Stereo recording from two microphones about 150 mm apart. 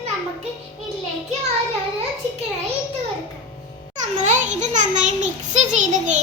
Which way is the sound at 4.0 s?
55° right (ahead or behind).